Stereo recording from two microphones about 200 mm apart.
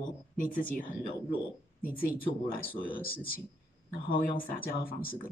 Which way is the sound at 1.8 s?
45° left (ahead or behind).